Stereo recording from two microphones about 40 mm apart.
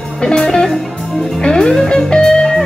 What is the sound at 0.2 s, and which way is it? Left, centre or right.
Music, centre.